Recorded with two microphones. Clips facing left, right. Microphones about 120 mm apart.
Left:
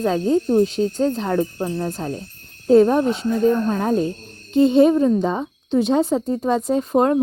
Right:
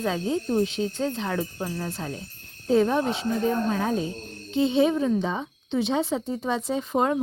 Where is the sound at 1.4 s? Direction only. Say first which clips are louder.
Left 8 dB; 25° left (ahead or behind).